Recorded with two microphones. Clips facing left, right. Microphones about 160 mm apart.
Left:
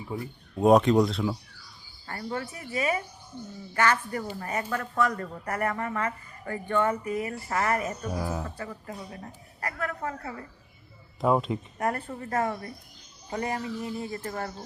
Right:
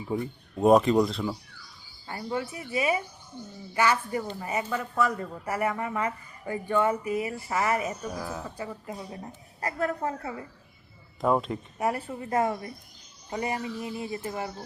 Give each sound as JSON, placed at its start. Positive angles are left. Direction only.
{"t": 0.2, "sound": "speech", "side_deg": 0}
{"t": 2.0, "sound": "speech", "side_deg": -15}
{"t": 8.1, "sound": "speech", "side_deg": 10}
{"t": 8.4, "sound": "a woman's voice", "side_deg": -15}
{"t": 11.2, "sound": "speech", "side_deg": 0}